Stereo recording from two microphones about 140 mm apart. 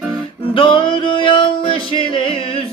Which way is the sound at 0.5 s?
35° left (ahead or behind).